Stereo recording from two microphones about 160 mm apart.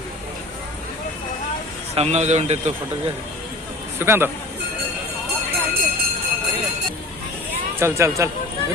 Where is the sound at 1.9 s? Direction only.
40° right (ahead or behind).